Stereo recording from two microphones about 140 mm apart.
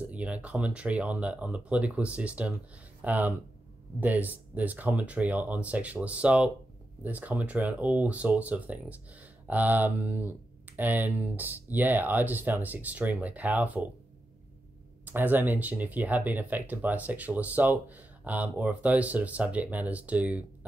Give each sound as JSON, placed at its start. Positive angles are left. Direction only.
{"t": 0.0, "sound": "speech", "side_deg": -10}
{"t": 15.0, "sound": "speech", "side_deg": -15}